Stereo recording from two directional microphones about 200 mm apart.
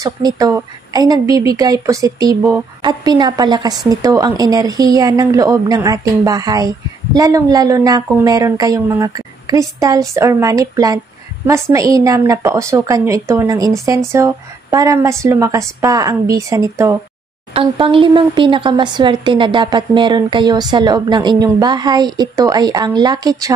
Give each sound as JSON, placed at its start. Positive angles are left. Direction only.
{"t": 0.0, "sound": "speech", "side_deg": -15}
{"t": 17.6, "sound": "speech", "side_deg": -25}